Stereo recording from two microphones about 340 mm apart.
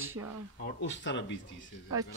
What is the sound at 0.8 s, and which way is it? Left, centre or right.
Speech, left.